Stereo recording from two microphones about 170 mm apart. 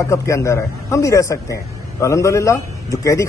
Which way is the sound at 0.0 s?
15° left (ahead or behind).